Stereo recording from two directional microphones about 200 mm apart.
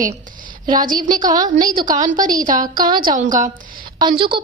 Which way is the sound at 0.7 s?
45° right (ahead or behind).